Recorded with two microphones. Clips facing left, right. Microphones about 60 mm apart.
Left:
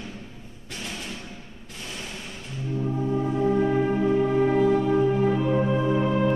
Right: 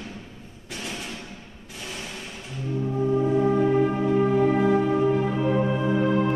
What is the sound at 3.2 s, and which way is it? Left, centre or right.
Music, centre.